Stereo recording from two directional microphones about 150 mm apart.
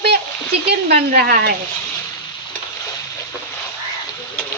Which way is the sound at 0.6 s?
90° right.